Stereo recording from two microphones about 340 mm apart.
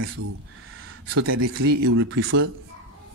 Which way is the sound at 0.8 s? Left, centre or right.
Right.